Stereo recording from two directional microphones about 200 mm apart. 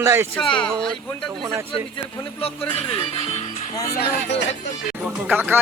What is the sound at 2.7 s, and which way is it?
Speech, 25° left (ahead or behind).